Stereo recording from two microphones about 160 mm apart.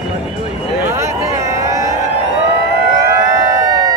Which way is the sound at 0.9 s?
20° right (ahead or behind).